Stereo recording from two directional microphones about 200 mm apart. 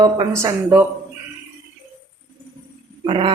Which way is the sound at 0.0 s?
20° right (ahead or behind).